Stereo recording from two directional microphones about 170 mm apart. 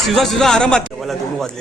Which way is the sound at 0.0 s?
Centre (ahead or behind).